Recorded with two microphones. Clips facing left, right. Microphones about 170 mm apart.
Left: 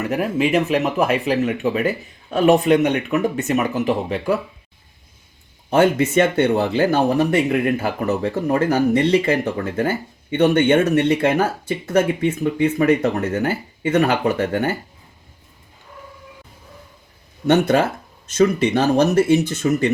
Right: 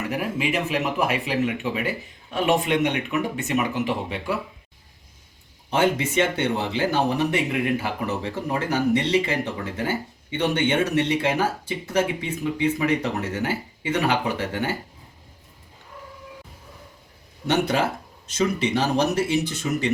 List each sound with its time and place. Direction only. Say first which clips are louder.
0.7 s speech: left 6 dB; 45° left (ahead or behind)
5.7 s speech: left 6 dB; 50° left (ahead or behind)
17.4 s speech: left 6 dB; 55° left (ahead or behind)